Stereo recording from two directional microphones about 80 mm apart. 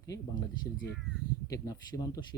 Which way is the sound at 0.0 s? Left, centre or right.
Left.